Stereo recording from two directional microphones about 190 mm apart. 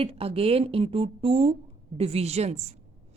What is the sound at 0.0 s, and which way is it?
A woman's voice, 30° right (ahead or behind).